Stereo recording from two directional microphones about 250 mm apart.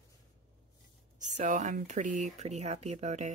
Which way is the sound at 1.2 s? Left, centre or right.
Right.